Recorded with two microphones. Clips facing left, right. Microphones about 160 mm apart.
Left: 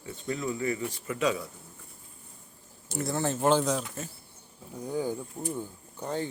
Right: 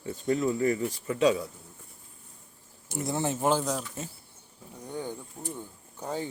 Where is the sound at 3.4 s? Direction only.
5° right (ahead or behind).